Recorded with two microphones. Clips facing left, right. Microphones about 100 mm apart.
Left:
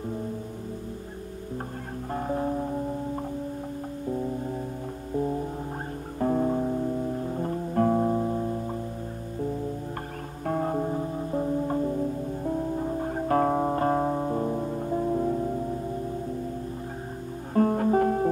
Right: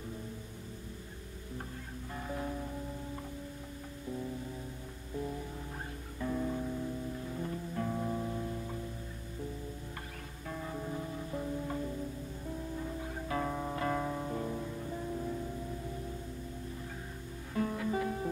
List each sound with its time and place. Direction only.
2.1 s music: 45° left (ahead or behind)
5.1 s music: 45° left (ahead or behind)
10.4 s music: 55° left (ahead or behind)
17.6 s music: 50° left (ahead or behind)